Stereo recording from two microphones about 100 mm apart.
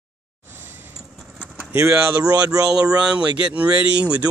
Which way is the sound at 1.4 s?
20° right (ahead or behind).